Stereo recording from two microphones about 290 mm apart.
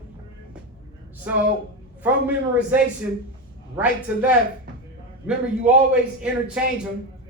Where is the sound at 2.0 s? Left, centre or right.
Centre.